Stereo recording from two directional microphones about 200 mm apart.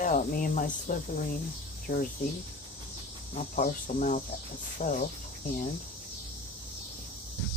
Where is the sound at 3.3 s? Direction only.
35° left (ahead or behind).